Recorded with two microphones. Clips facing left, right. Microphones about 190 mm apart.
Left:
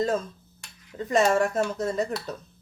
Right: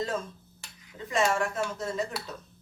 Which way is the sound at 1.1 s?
40° left (ahead or behind).